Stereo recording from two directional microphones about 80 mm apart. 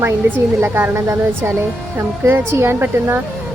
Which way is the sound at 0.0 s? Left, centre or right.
Right.